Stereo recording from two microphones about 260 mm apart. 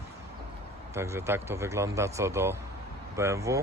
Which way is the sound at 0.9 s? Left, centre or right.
Centre.